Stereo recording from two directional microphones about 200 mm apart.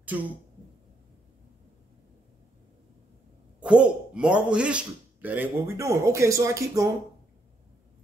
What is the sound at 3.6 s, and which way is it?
Speech, 5° right (ahead or behind).